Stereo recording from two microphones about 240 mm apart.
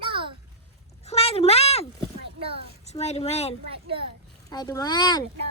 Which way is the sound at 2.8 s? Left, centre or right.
Left.